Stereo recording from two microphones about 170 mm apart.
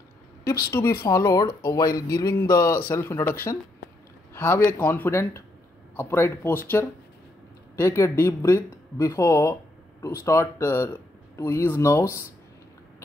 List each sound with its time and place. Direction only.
0.4 s a woman's voice: 15° left (ahead or behind)
4.3 s a sound: 15° left (ahead or behind)
4.6 s speech: 10° left (ahead or behind)
7.7 s speech: 15° left (ahead or behind)